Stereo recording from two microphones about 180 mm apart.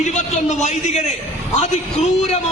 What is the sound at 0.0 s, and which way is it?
A man's voice, 40° left (ahead or behind).